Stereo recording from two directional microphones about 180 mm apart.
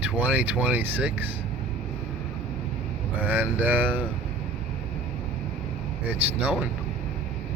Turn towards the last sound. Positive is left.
turn(degrees=-10)  # may be behind; listen again after turning